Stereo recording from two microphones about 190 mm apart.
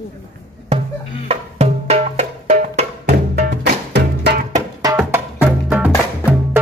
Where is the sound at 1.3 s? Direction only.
35° right (ahead or behind).